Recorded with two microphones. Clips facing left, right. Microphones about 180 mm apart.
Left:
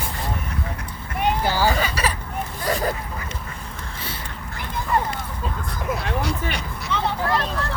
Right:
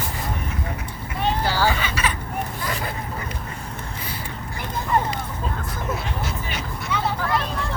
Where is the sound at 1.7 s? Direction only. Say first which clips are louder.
Left 2 dB; 40° left (ahead or behind).